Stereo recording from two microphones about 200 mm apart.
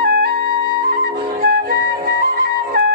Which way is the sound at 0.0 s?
50° right (ahead or behind).